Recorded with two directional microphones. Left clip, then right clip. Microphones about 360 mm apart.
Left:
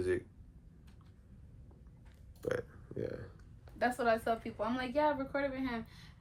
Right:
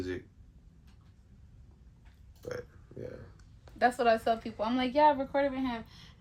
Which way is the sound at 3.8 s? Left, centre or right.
Right.